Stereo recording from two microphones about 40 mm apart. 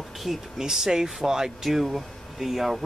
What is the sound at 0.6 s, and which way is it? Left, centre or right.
Speech, centre.